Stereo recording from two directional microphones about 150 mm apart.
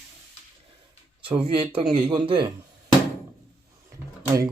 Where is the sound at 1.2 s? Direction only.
35° right (ahead or behind).